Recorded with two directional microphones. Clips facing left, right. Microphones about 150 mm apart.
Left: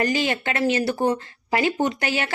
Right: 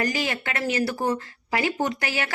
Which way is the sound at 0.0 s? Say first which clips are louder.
Left 4 dB; 25° left (ahead or behind).